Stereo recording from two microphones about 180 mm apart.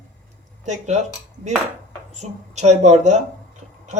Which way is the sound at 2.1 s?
40° right (ahead or behind).